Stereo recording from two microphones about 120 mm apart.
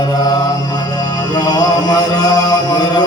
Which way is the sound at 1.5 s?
35° left (ahead or behind).